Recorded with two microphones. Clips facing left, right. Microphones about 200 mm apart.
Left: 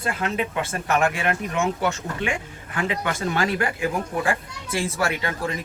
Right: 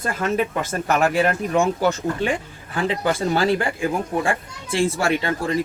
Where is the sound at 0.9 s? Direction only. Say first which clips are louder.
Right 3 dB; 35° right (ahead or behind).